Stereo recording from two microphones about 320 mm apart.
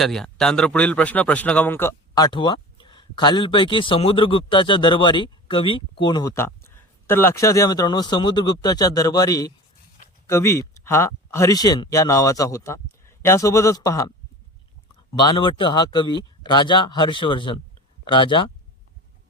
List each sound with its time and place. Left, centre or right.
0.0 s speech: centre
15.1 s speech: centre